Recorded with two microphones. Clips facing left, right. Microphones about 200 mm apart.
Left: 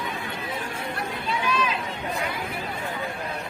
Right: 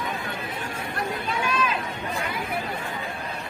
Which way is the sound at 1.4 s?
50° right (ahead or behind).